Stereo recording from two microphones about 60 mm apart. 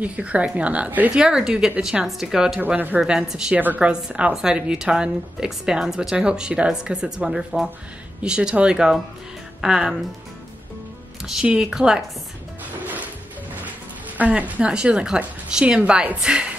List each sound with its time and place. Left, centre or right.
0.0 s a woman's voice: right
1.1 s a woman's voice: centre
2.6 s a woman's voice: right
3.0 s a woman's voice: centre
3.5 s a woman's voice: right; by 9.9 s centre
11.4 s a woman's voice: centre
14.1 s a woman's voice: right